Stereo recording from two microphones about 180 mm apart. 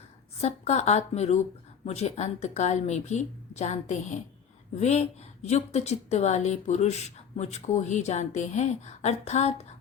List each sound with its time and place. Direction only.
0.4 s a woman's voice: 40° left (ahead or behind)